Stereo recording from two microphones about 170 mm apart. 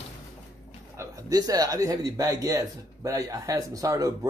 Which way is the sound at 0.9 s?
20° right (ahead or behind).